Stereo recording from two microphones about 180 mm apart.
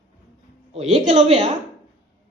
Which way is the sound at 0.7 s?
35° right (ahead or behind).